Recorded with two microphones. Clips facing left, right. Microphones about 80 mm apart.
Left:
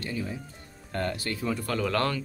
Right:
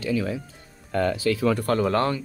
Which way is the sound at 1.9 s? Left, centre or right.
Right.